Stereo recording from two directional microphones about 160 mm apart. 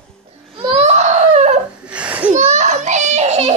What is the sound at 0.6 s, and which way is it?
Baby cry, 40° right (ahead or behind).